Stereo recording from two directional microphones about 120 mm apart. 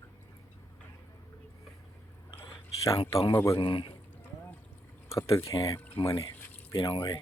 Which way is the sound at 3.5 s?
45° left (ahead or behind).